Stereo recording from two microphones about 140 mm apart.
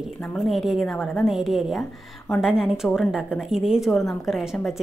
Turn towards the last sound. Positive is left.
turn(degrees=0)  # may be behind; listen again after turning